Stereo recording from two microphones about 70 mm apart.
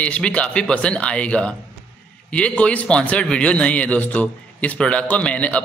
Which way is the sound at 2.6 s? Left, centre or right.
Centre.